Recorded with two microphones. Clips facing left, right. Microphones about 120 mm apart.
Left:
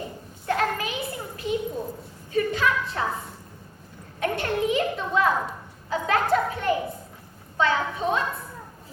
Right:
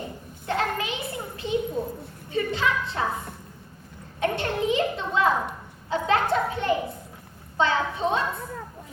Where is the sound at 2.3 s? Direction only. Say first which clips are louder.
Left 2 dB; 25° right (ahead or behind).